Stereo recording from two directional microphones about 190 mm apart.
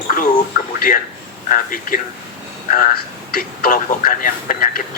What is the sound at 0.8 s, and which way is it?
A man's voice, 45° left (ahead or behind).